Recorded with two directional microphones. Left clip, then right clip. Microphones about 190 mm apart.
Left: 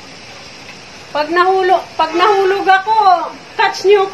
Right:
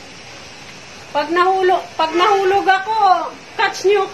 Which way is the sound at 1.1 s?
20° left (ahead or behind).